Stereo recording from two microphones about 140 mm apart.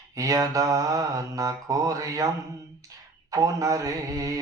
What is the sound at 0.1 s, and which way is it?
Speech, 25° right (ahead or behind).